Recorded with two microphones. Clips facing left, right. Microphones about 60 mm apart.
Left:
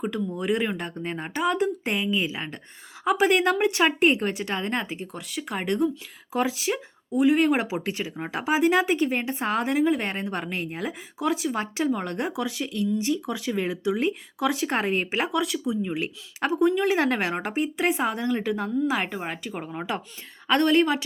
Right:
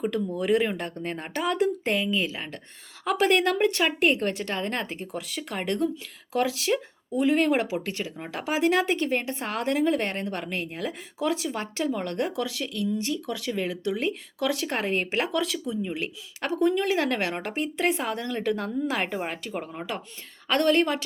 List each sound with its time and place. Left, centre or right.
0.0 s speech: centre
1.8 s speech: centre
4.9 s speech: centre; by 10.9 s left
11.2 s speech: centre
11.5 s speech: centre